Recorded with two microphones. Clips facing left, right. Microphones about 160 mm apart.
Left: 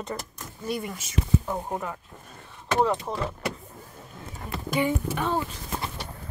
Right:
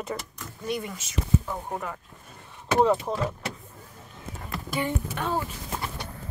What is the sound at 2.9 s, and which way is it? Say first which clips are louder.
Speech: right 2 dB; 5° right (ahead or behind).